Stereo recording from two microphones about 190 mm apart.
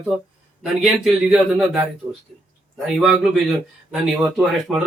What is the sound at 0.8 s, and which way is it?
Speech, centre (ahead or behind).